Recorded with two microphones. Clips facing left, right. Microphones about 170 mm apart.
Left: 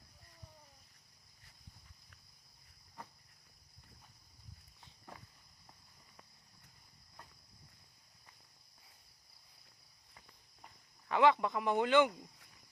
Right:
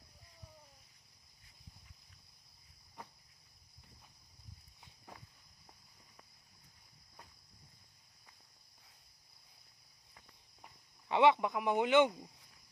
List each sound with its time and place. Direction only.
11.1 s speech: 20° right (ahead or behind)